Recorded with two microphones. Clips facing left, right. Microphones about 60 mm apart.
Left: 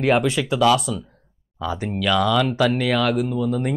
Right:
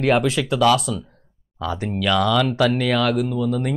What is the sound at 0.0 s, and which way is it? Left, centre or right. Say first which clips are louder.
Speech: even; centre.